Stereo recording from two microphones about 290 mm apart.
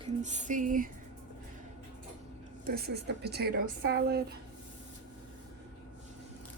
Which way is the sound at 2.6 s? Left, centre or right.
Right.